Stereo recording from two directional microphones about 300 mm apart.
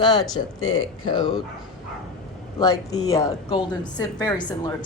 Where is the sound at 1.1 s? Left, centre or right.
Centre.